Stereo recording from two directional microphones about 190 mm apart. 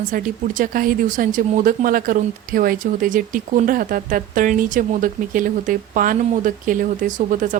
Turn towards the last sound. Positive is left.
turn(degrees=-45)  # may be behind; listen again after turning